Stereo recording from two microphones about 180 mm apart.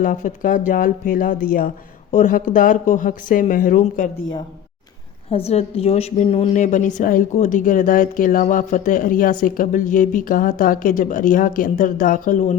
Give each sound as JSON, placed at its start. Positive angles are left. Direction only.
{"t": 0.0, "sound": "a woman's voice", "side_deg": 45}
{"t": 5.3, "sound": "a woman's voice", "side_deg": 35}